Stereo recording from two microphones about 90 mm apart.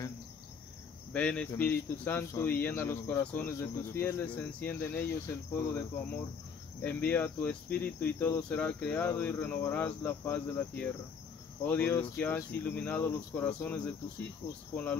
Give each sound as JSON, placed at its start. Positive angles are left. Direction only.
{"t": 1.1, "sound": "speech", "side_deg": 15}